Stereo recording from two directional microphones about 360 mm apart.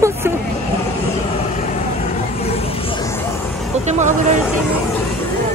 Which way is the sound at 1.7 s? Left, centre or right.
Centre.